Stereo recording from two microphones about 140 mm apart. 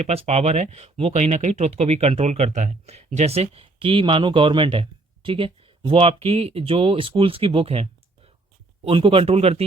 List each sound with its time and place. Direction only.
0.0 s speech: 50° right (ahead or behind)